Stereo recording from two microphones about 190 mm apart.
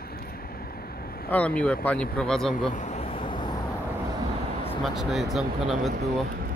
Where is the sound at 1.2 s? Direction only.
5° left (ahead or behind).